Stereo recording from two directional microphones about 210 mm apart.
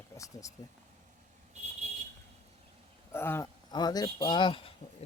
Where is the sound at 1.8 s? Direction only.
30° right (ahead or behind).